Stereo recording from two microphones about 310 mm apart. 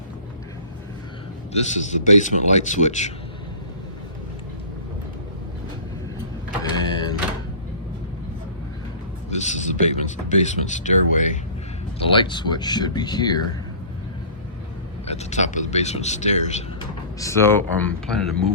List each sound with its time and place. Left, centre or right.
1.9 s speech: left
6.6 s printer: centre
9.3 s a sound: left
12.0 s speech: centre
15.0 s speech: left
17.2 s speech: centre